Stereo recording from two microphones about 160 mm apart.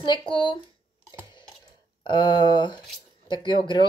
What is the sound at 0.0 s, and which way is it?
Speech, 30° left (ahead or behind).